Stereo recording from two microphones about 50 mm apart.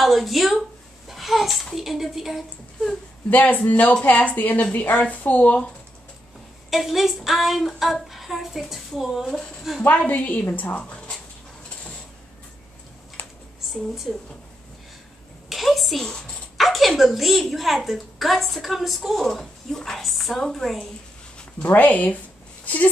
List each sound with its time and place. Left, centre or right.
0.0 s a child's voice: centre
3.3 s speech: left
6.7 s a woman's voice: centre
9.9 s speech: left
13.2 s a sound: left
13.7 s a woman's voice: centre
15.5 s a woman's voice: centre
21.6 s speech: left